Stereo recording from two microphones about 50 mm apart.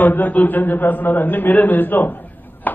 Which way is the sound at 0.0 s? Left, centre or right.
Left.